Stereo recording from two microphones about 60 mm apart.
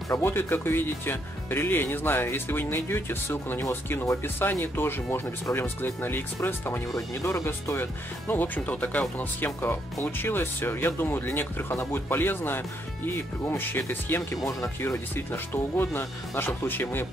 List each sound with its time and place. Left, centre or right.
0.2 s speech: left
8.5 s speech: left
9.4 s speech: left
14.3 s speech: left
14.8 s speech: left